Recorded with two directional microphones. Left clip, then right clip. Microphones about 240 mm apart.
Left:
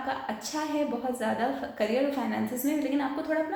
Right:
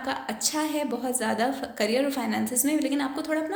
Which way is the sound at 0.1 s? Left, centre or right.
Right.